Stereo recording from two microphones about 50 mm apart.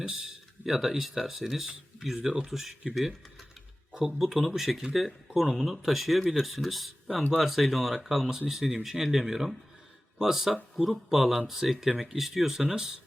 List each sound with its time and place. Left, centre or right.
0.0 s speech: centre